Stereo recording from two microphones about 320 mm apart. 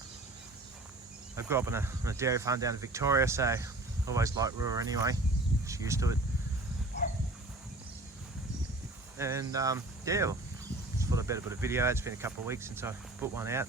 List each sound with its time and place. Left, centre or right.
1.4 s speech: centre
9.1 s speech: centre